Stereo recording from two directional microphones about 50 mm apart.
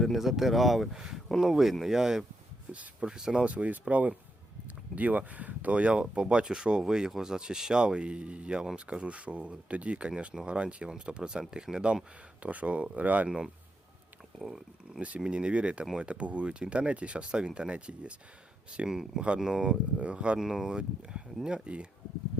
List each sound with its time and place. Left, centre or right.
0.0 s speech: centre
2.7 s speech: right
3.2 s speech: centre
3.4 s speech: right
12.4 s speech: right
13.2 s speech: centre
14.3 s speech: centre
14.9 s speech: right
18.9 s speech: centre
20.4 s speech: centre